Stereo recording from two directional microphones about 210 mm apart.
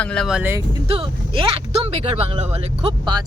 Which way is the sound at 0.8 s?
25° right (ahead or behind).